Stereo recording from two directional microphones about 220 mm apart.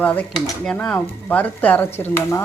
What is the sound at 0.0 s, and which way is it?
Speech, 5° left (ahead or behind).